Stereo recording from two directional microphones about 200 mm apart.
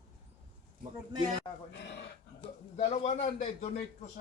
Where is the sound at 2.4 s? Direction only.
30° left (ahead or behind).